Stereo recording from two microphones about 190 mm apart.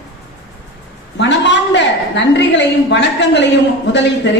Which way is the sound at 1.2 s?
70° left (ahead or behind).